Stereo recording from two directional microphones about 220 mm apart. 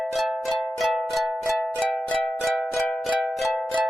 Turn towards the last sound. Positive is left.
turn(degrees=0)  # may be behind; listen again after turning